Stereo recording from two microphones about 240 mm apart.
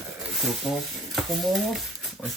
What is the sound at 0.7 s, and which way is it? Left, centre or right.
Speech, centre.